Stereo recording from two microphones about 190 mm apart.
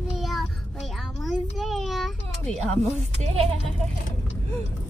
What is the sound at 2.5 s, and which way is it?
Speech, 35° right (ahead or behind).